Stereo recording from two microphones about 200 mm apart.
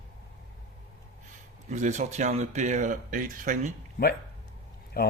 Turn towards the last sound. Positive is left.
turn(degrees=50)  # may be behind; listen again after turning